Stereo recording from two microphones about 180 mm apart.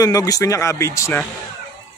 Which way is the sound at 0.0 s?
20° left (ahead or behind).